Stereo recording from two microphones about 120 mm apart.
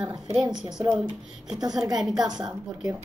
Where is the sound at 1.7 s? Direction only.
5° right (ahead or behind).